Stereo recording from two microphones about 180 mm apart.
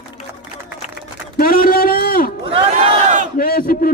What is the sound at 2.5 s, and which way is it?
Battle cry, 30° right (ahead or behind).